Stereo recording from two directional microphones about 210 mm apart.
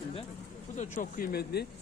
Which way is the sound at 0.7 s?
35° left (ahead or behind).